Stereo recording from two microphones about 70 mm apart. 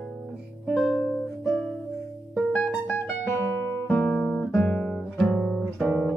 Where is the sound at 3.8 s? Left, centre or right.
Left.